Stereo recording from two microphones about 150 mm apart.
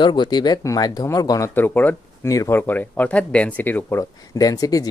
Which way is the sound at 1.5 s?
15° left (ahead or behind).